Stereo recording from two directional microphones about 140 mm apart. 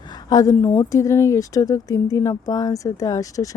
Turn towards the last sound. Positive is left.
turn(degrees=25)  # may be behind; listen again after turning